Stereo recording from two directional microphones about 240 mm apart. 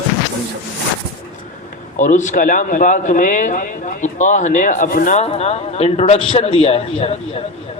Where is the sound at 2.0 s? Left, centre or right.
Left.